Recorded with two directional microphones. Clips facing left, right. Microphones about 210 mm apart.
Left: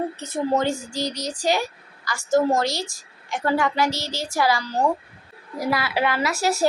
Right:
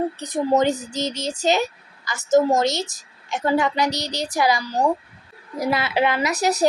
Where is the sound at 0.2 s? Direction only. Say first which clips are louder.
Right 3 dB; 15° right (ahead or behind).